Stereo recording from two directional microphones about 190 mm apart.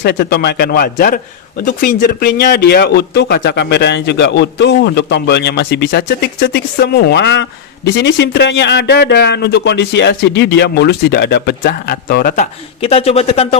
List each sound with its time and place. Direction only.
0.0 s speech: 60° left (ahead or behind)
12.8 s speech: 30° left (ahead or behind)